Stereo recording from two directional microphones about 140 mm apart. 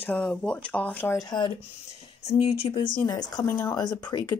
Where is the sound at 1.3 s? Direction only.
30° left (ahead or behind).